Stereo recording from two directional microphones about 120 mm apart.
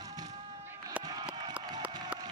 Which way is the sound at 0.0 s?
35° right (ahead or behind).